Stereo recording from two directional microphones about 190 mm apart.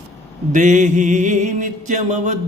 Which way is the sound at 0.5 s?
40° right (ahead or behind).